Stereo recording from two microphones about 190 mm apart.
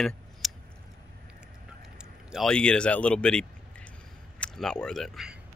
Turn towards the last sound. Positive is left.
turn(degrees=0)  # may be behind; listen again after turning